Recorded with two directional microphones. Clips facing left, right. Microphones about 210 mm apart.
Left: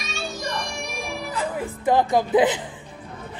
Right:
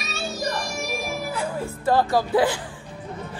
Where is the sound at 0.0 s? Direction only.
Centre (ahead or behind).